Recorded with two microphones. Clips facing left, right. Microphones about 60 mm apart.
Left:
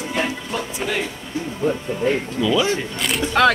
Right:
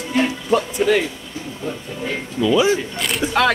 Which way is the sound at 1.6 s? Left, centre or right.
Left.